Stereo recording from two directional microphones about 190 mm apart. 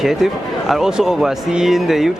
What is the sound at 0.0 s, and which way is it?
Speech, centre (ahead or behind).